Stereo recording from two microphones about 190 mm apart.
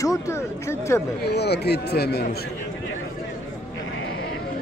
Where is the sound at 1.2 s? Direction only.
60° left (ahead or behind).